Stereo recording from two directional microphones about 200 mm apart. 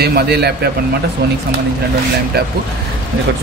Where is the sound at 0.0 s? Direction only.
50° right (ahead or behind).